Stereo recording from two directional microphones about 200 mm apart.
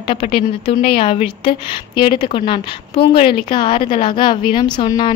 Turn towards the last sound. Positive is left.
turn(degrees=20)  # may be behind; listen again after turning